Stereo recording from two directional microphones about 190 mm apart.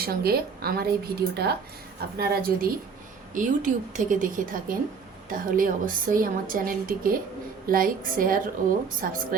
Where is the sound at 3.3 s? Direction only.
40° right (ahead or behind).